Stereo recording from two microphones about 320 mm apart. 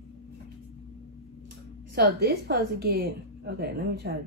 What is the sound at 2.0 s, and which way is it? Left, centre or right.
A woman's voice, right.